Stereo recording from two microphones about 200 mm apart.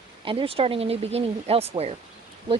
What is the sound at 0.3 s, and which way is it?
Speech, 25° right (ahead or behind).